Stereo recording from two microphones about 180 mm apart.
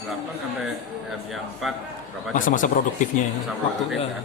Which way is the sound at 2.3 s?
45° left (ahead or behind).